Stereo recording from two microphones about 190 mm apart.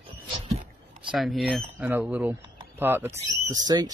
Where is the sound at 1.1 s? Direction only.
Centre (ahead or behind).